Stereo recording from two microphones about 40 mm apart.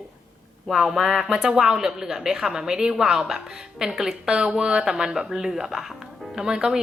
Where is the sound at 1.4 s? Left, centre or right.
Centre.